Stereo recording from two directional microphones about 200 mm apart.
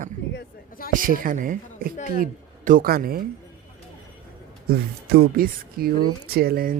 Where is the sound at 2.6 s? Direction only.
45° right (ahead or behind).